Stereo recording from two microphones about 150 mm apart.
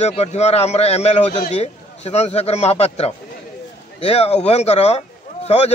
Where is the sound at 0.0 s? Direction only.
45° left (ahead or behind).